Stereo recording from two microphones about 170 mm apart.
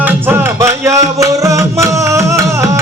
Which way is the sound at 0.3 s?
15° right (ahead or behind).